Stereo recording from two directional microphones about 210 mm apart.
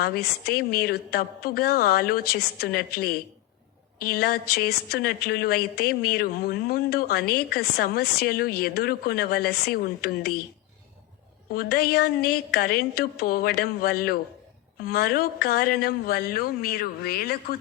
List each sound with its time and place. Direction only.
0.0 s a woman's voice: 50° left (ahead or behind)
11.5 s a woman's voice: 50° left (ahead or behind)